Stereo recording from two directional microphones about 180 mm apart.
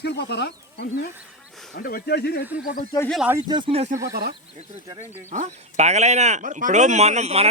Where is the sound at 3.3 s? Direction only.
20° right (ahead or behind).